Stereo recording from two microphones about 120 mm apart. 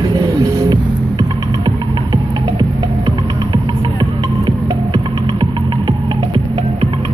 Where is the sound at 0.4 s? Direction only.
30° right (ahead or behind).